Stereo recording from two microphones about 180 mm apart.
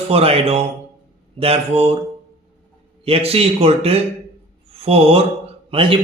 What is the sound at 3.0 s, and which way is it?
A man's voice, 35° right (ahead or behind).